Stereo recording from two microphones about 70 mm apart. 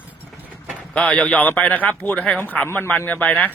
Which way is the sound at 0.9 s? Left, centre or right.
Centre.